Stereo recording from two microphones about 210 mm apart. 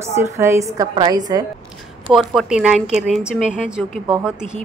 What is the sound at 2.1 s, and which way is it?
A woman's voice, 5° right (ahead or behind).